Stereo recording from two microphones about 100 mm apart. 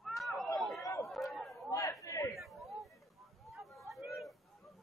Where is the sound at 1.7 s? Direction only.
35° left (ahead or behind).